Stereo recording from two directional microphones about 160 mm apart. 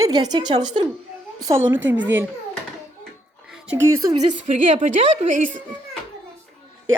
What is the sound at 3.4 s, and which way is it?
Music, 5° right (ahead or behind).